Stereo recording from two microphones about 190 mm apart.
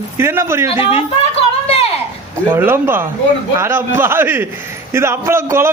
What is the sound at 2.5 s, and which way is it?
A man's voice, 10° right (ahead or behind).